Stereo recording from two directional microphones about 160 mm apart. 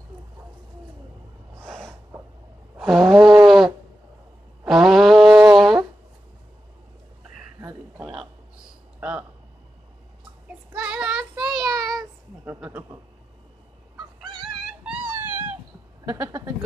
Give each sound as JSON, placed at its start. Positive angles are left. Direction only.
{"t": 1.6, "sound": "snort", "side_deg": 0}
{"t": 2.8, "sound": "a sound", "side_deg": -5}
{"t": 10.5, "sound": "child singing", "side_deg": -10}
{"t": 12.4, "sound": "a sound", "side_deg": -10}
{"t": 13.9, "sound": "fowl", "side_deg": -30}
{"t": 14.8, "sound": "wail", "side_deg": -10}
{"t": 16.1, "sound": "speech", "side_deg": -20}